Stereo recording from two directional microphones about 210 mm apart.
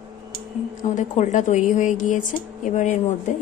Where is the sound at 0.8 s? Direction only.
35° left (ahead or behind).